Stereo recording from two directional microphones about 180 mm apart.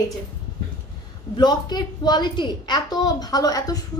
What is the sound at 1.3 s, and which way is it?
A woman's voice, 25° left (ahead or behind).